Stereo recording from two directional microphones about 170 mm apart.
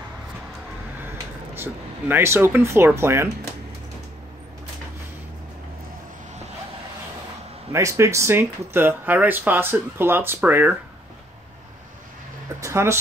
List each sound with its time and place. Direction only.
1.0 s speech: 10° right (ahead or behind)
7.7 s speech: 15° right (ahead or behind)
12.5 s speech: 15° right (ahead or behind)